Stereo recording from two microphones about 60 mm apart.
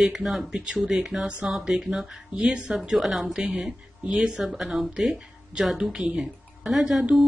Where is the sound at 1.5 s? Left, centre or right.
Centre.